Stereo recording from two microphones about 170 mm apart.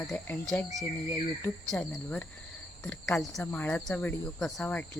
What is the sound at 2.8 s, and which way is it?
Cricket, 5° left (ahead or behind).